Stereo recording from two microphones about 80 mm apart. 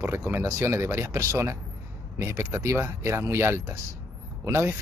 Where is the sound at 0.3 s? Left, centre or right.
Right.